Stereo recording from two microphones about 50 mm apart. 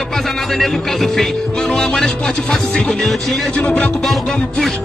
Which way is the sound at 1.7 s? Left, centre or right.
Centre.